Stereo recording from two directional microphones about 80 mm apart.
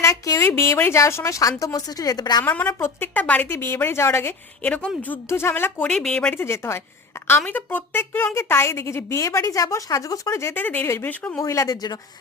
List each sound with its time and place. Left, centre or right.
0.0 s a woman's voice: left
2.4 s a woman's voice: left
3.5 s speech: left
4.6 s speech: centre
5.3 s a woman's voice: left
5.9 s speech: centre
6.3 s speech: left
10.6 s a woman's voice: left
11.3 s speech: left